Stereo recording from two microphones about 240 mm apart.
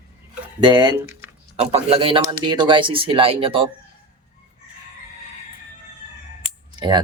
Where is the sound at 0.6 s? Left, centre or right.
Centre.